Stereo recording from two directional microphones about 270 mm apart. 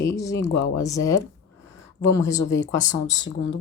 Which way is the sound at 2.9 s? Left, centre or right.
Left.